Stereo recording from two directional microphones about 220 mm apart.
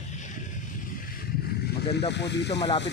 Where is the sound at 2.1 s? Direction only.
50° left (ahead or behind).